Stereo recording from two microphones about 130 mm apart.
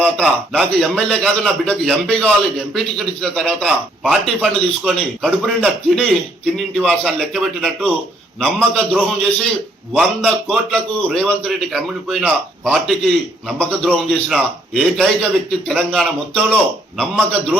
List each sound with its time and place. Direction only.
0.0 s a man's voice: 5° left (ahead or behind)
4.9 s a man's voice: 5° right (ahead or behind)